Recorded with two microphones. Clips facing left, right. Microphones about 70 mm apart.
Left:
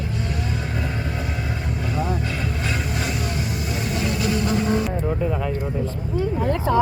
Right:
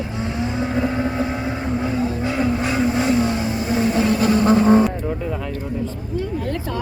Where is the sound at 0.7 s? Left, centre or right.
Right.